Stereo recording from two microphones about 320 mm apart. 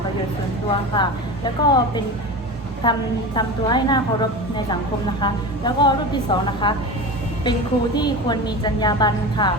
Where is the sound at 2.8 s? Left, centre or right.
Centre.